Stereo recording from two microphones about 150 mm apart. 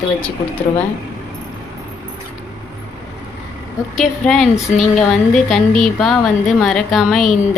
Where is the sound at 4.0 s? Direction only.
Centre (ahead or behind).